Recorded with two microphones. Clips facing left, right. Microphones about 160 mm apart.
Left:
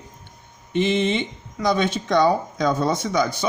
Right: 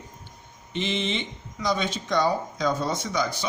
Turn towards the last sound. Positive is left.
turn(degrees=60)  # may be behind; listen again after turning